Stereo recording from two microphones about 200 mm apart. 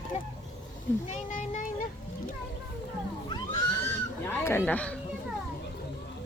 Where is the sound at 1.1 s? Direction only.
40° left (ahead or behind).